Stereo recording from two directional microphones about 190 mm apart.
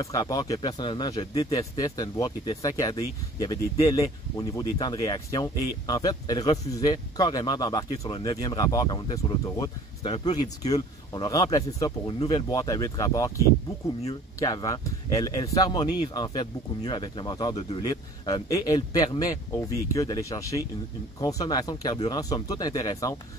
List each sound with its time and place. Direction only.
0.0 s speech: 20° left (ahead or behind)
1.6 s speech: 20° left (ahead or behind)
14.4 s speech: 20° left (ahead or behind)